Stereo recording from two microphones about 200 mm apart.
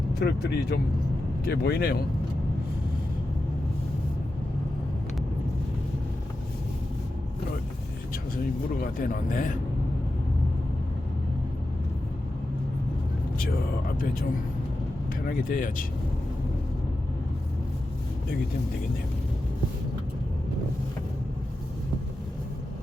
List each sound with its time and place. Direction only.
0.2 s speech: 55° left (ahead or behind)
8.8 s speech: 45° left (ahead or behind)
14.0 s speech: 45° left (ahead or behind)
15.3 s speech: 45° left (ahead or behind)